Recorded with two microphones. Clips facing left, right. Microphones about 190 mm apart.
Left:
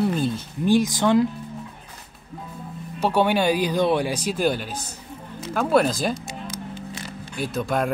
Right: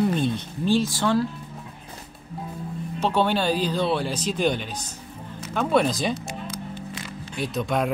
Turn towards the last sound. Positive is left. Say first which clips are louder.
# left 1 dB
turn(degrees=0)  # may be behind; listen again after turning